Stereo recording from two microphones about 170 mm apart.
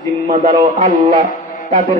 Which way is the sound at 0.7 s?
55° right (ahead or behind).